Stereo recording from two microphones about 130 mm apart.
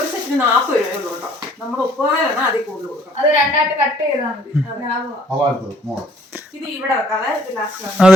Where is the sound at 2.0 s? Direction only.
15° right (ahead or behind).